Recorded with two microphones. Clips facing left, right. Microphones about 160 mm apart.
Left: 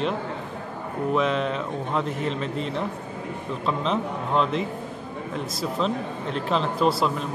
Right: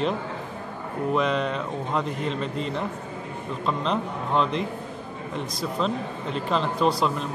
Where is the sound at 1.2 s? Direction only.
Centre (ahead or behind).